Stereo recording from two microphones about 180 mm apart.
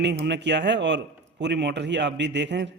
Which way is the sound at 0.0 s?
70° right (ahead or behind).